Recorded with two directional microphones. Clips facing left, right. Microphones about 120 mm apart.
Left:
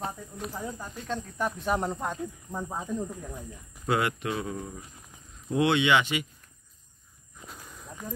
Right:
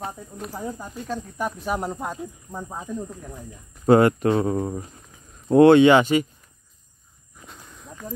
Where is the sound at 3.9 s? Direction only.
40° right (ahead or behind).